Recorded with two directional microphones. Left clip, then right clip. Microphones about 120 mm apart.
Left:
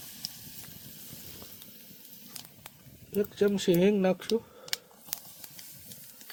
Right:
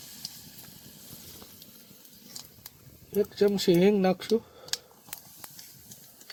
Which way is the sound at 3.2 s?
70° right (ahead or behind).